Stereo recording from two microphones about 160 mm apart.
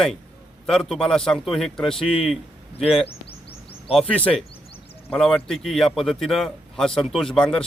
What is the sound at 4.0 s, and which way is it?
A man's voice, 10° left (ahead or behind).